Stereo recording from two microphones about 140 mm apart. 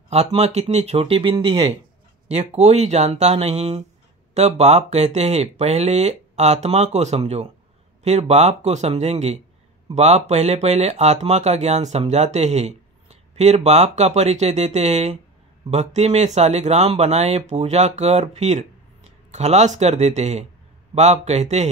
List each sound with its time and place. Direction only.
0.3 s speech: 50° right (ahead or behind); by 1.7 s 35° right (ahead or behind)
2.2 s speech: 50° right (ahead or behind)